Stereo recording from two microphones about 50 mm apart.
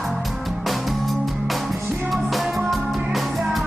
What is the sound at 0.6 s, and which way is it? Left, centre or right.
Music, centre.